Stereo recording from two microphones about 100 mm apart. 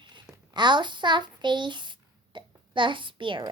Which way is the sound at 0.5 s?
50° right (ahead or behind).